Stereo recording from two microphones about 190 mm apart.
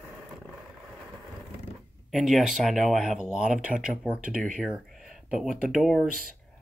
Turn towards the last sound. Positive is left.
turn(degrees=0)  # may be behind; listen again after turning